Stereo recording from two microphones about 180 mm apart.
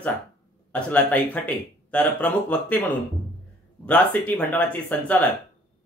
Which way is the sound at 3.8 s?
10° left (ahead or behind).